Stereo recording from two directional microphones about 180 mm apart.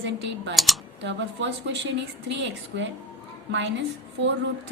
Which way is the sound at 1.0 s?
85° right.